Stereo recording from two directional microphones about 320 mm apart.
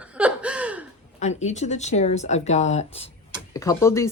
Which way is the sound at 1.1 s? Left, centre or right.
Left.